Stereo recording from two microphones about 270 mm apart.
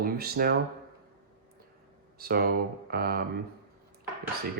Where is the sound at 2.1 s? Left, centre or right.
Right.